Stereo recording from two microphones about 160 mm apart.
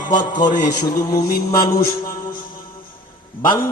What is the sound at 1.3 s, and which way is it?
Mantra, 70° left (ahead or behind).